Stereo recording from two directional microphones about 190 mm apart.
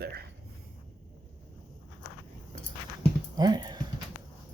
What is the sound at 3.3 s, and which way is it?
Speech, 20° right (ahead or behind).